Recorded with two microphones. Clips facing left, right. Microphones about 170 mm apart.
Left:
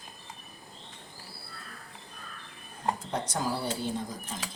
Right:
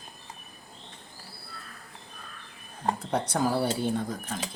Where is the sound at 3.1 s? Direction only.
60° right (ahead or behind).